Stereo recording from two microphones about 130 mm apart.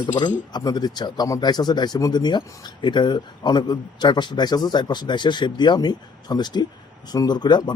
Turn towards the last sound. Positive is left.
turn(degrees=35)  # may be behind; listen again after turning